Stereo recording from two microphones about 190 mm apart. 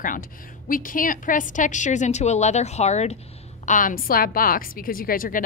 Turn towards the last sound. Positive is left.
turn(degrees=45)  # may be behind; listen again after turning